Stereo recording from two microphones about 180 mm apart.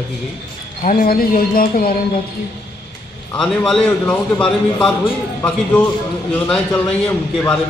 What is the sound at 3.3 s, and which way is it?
A man's voice, 5° left (ahead or behind).